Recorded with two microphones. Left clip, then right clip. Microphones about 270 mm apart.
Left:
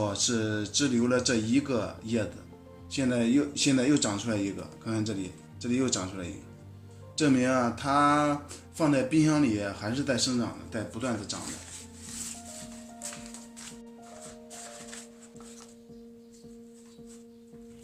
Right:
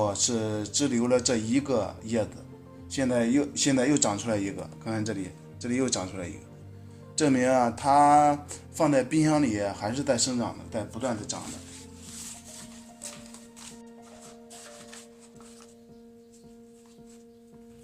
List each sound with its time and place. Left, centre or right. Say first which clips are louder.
0.0 s music: right 2 dB; right